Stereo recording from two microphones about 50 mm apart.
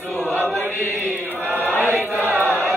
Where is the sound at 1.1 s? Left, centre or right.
Right.